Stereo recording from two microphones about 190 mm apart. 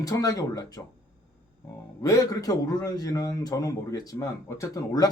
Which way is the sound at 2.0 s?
15° left (ahead or behind).